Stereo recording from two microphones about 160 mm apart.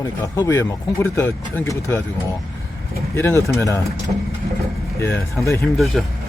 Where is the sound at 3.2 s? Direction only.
15° left (ahead or behind).